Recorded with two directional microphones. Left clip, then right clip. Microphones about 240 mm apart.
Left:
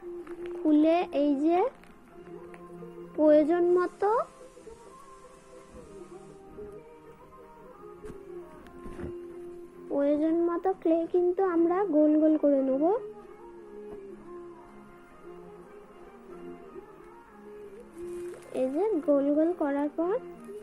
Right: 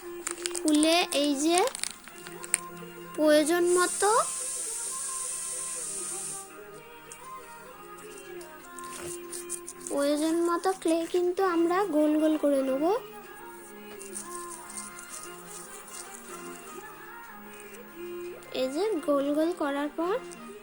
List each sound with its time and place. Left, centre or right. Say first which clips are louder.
0.6 s a child's voice: even; right
3.2 s child singing: left 1 dB; right
9.9 s child singing: left 1 dB; right
18.5 s child singing: left 1 dB; centre